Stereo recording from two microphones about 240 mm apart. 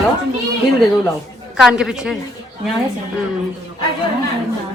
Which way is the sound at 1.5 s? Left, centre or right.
Centre.